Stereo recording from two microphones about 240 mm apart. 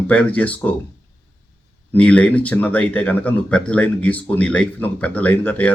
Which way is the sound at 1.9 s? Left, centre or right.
Centre.